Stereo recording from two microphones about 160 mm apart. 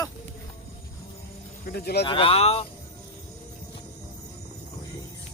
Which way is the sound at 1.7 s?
80° left.